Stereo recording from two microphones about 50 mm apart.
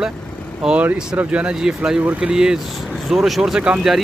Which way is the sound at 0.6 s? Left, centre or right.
Centre.